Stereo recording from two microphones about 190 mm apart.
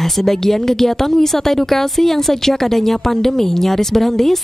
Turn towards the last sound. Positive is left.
turn(degrees=0)  # may be behind; listen again after turning